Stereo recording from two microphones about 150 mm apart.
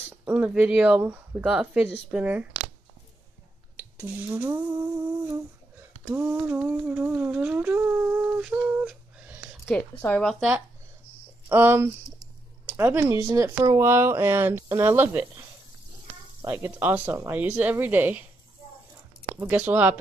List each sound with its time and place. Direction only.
0.2 s speech: 10° right (ahead or behind)
3.7 s speech: 15° right (ahead or behind)
6.0 s humming: 10° right (ahead or behind)
9.7 s speech: 10° left (ahead or behind)
11.4 s speech: 15° right (ahead or behind)
16.4 s speech: 15° right (ahead or behind)
19.4 s speech: 15° right (ahead or behind)